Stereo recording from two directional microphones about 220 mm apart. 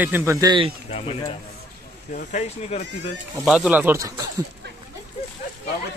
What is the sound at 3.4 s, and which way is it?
Speech, 5° right (ahead or behind).